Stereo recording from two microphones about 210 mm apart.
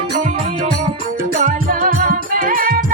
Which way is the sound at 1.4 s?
40° right (ahead or behind).